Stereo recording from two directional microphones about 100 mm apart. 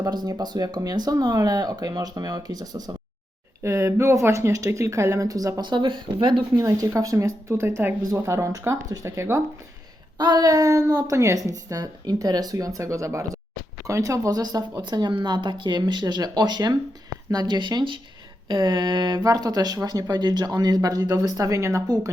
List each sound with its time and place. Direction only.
0.0 s a woman's voice: 40° right (ahead or behind)
3.6 s a woman's voice: 30° right (ahead or behind); by 6.4 s 55° right (ahead or behind)
6.6 s a woman's voice: 35° right (ahead or behind)
10.2 s a woman's voice: 45° right (ahead or behind)